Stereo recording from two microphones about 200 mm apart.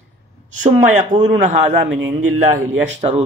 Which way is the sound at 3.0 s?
35° right (ahead or behind).